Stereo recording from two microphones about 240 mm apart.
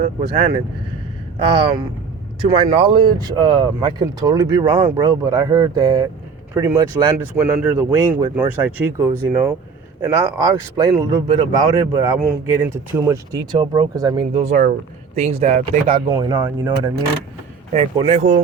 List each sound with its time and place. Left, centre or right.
1.4 s speech: right
16.0 s speech: centre